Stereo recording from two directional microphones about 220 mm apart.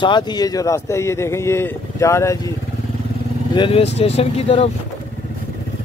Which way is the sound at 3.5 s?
25° left (ahead or behind).